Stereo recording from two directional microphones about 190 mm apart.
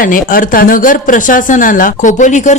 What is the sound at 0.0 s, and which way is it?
A man's voice, 45° left (ahead or behind).